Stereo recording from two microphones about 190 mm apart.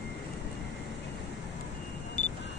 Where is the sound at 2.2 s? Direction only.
40° left (ahead or behind).